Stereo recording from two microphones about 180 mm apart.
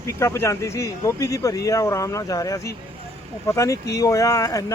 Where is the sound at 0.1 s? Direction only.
15° left (ahead or behind).